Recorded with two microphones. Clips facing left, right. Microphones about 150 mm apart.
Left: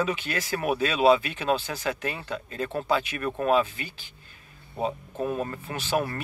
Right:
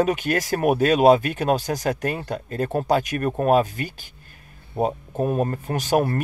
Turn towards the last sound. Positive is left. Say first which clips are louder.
# right 7 dB
turn(degrees=-45)  # may be behind; listen again after turning